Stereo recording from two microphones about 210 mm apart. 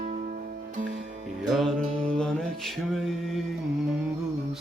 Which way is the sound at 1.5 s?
Centre (ahead or behind).